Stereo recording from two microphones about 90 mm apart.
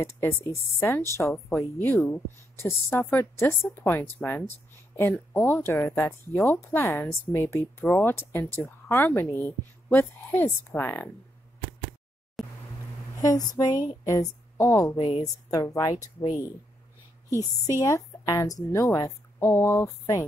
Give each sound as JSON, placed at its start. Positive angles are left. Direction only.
{"t": 0.0, "sound": "speech", "side_deg": 25}
{"t": 12.4, "sound": "a sound", "side_deg": 0}
{"t": 13.2, "sound": "a woman's voice", "side_deg": 45}
{"t": 17.3, "sound": "a woman's voice", "side_deg": 40}